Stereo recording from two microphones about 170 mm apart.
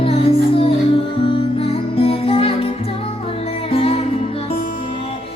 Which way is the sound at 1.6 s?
35° left (ahead or behind).